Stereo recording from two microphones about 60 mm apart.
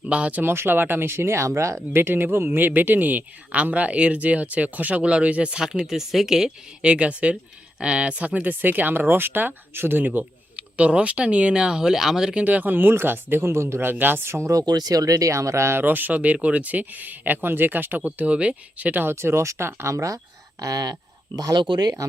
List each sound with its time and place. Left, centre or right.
0.1 s speech: right
0.4 s speech: right
2.0 s speech: right; by 6.5 s centre
6.8 s speech: centre; by 13.8 s right
13.8 s speech: right
14.5 s speech: right
15.8 s speech: right
18.9 s speech: right
19.1 s speech: right
20.6 s speech: right